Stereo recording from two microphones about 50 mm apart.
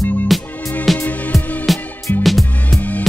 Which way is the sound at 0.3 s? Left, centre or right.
Centre.